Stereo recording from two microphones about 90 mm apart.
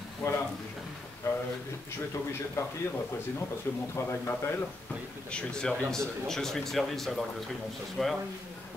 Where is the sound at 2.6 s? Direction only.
30° left (ahead or behind).